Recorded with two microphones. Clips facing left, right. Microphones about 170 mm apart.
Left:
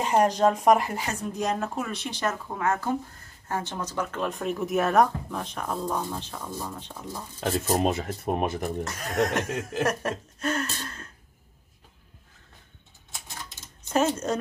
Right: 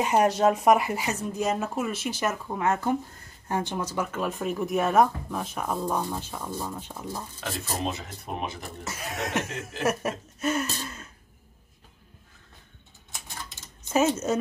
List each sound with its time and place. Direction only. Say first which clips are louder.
0.0 s speech: even; 5° right (ahead or behind)
2.6 s speech: right 1 dB; 20° right (ahead or behind)
7.7 s speech: left 6 dB; 55° left (ahead or behind)
8.8 s speech: left 4 dB; 5° right (ahead or behind)
13.8 s speech: right 1 dB; 5° right (ahead or behind)